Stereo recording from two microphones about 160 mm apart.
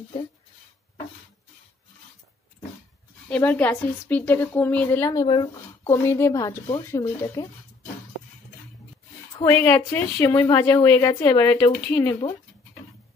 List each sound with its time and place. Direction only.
3.3 s a woman's voice: 10° left (ahead or behind)
9.4 s a woman's voice: 10° left (ahead or behind)